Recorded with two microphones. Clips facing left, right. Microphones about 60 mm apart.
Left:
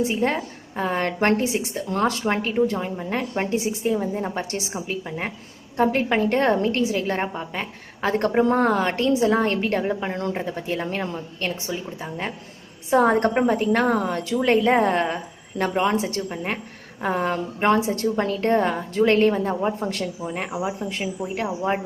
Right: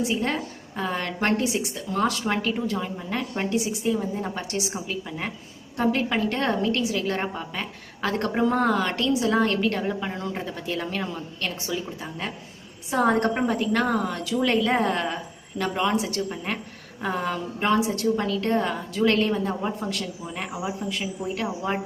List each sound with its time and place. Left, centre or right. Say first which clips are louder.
0.0 s a woman's voice: left 3 dB; left
2.0 s a woman's voice: left 1 dB; left
17.0 s a woman's voice: left 4 dB; left